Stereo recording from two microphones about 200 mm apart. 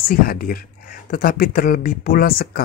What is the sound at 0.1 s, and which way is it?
Speech, 45° left (ahead or behind).